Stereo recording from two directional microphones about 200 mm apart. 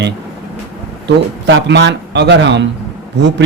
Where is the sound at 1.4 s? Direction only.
60° right (ahead or behind).